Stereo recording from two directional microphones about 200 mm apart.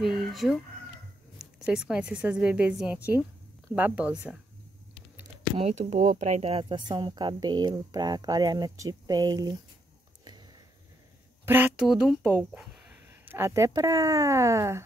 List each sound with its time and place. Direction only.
0.0 s speech: centre (ahead or behind)
5.6 s speech: 35° right (ahead or behind)
6.6 s speech: 20° right (ahead or behind)
11.4 s speech: 10° right (ahead or behind)